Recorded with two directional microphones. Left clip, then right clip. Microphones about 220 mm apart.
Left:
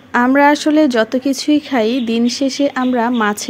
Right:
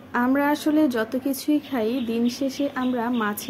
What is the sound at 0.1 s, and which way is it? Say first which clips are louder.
Speech: left 11 dB; 40° left (ahead or behind).